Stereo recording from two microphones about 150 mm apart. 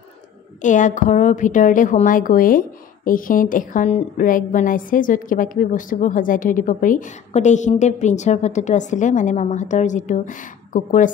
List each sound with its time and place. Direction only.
0.6 s a woman's voice: 55° left (ahead or behind)